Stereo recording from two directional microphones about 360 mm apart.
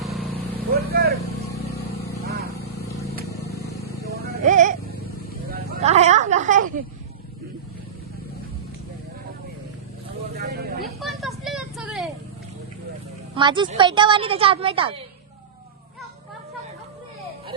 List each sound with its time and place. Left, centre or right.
0.8 s vehicle: right
3.6 s vehicle: left
4.0 s a sound: right
10.3 s vehicle: right
11.0 s vehicle: centre
13.3 s a woman's voice: centre